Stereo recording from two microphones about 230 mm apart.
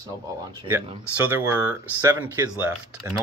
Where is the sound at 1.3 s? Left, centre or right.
Centre.